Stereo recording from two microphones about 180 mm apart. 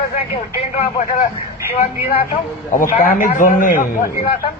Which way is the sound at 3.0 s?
50° left (ahead or behind).